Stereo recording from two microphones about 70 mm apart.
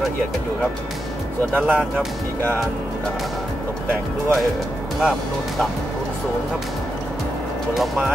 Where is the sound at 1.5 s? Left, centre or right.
Centre.